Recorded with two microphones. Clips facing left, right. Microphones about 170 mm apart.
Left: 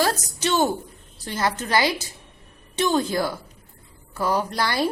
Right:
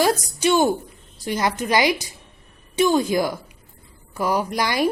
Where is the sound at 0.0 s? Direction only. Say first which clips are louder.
Right 4 dB; 10° right (ahead or behind).